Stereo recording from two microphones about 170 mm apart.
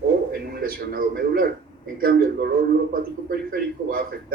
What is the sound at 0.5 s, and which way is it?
A man's voice, 60° right (ahead or behind).